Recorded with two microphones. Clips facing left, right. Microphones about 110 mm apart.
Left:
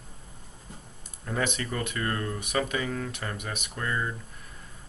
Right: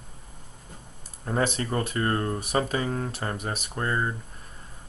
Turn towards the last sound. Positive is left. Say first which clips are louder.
# right 3 dB
turn(degrees=-35)  # may be behind; listen again after turning